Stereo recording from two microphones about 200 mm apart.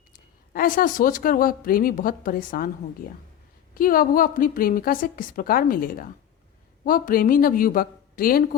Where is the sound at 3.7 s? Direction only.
45° left (ahead or behind).